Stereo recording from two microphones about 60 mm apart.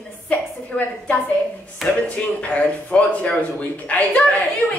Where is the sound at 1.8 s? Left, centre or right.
Centre.